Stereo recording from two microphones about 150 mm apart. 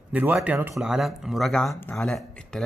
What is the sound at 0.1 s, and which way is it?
Speech, 10° right (ahead or behind).